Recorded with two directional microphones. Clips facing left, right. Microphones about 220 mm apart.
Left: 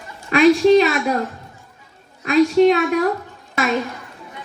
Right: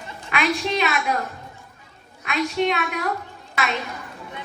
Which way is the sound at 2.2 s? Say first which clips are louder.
Left 10 dB; 35° left (ahead or behind).